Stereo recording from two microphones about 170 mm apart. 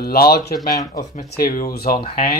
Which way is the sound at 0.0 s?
65° left (ahead or behind).